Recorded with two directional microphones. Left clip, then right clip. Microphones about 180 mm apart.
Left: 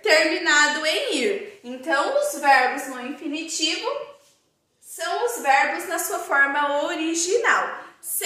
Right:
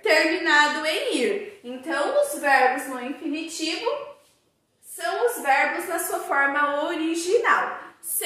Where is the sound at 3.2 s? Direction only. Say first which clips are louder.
Even; 5° left (ahead or behind).